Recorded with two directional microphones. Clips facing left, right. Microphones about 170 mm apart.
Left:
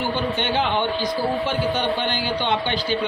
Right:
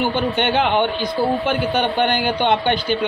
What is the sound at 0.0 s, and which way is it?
A man's voice, 60° right (ahead or behind).